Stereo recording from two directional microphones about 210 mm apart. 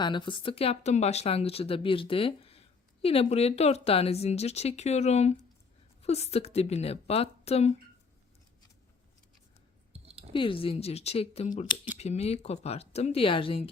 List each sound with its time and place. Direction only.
0.0 s speech: 20° left (ahead or behind)
9.9 s clicking: 30° right (ahead or behind)
10.3 s speech: 25° left (ahead or behind)